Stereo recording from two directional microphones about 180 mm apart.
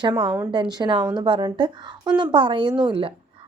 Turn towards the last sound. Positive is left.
turn(degrees=-30)  # may be behind; listen again after turning